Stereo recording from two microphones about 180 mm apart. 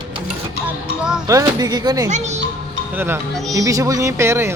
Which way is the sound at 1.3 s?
20° right (ahead or behind).